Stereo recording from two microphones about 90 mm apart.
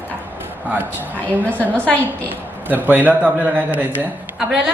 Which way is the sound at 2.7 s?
20° right (ahead or behind).